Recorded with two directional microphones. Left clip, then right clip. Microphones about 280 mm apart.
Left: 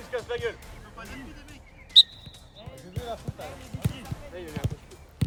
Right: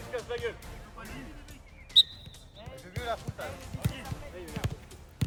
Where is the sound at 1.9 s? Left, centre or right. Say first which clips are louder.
Left 5 dB; left.